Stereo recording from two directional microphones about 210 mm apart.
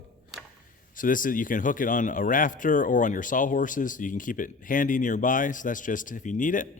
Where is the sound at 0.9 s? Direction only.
40° left (ahead or behind).